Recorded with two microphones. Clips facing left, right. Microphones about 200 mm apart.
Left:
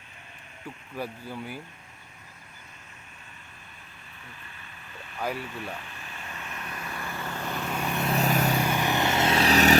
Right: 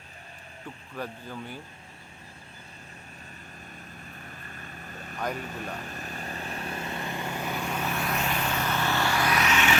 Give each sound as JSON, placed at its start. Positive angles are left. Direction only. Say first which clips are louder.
{"t": 0.9, "sound": "speech", "louder": "left 2 dB", "side_deg": 10}
{"t": 4.3, "sound": "vehicle", "louder": "right 5 dB", "side_deg": -45}
{"t": 5.4, "sound": "speech", "louder": "even", "side_deg": -40}
{"t": 5.7, "sound": "vehicle", "louder": "right 4 dB", "side_deg": -40}
{"t": 7.9, "sound": "vehicle", "louder": "left 2 dB", "side_deg": 20}
{"t": 8.1, "sound": "vehicle", "louder": "left 5 dB", "side_deg": 40}
{"t": 8.5, "sound": "vehicle", "louder": "left 2 dB", "side_deg": 15}